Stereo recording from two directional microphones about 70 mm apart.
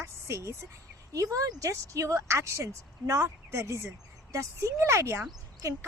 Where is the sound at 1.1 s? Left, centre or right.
Right.